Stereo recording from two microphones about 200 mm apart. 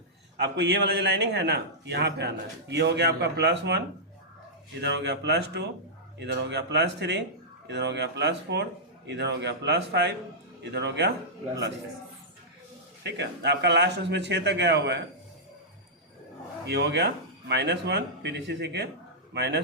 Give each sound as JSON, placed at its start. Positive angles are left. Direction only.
{"t": 0.3, "sound": "a man's voice", "side_deg": -55}
{"t": 13.0, "sound": "a man's voice", "side_deg": -60}
{"t": 16.6, "sound": "a man's voice", "side_deg": -60}